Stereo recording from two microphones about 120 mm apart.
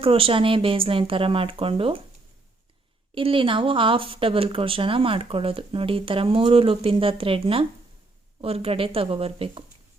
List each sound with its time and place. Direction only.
0.0 s speech: 50° right (ahead or behind)
3.2 s speech: 45° right (ahead or behind)